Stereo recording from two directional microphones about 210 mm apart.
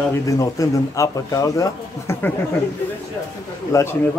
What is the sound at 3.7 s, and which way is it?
Speech, 15° left (ahead or behind).